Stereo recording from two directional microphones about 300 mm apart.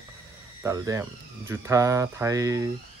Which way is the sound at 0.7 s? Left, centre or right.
Centre.